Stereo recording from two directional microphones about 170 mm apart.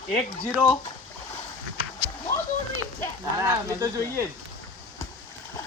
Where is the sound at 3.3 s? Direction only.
20° right (ahead or behind).